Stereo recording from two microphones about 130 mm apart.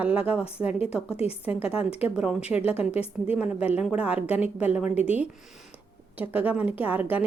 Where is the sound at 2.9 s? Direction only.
10° right (ahead or behind).